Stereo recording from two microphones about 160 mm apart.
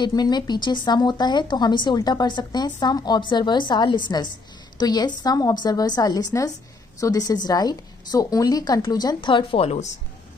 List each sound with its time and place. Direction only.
0.0 s speech: 25° left (ahead or behind)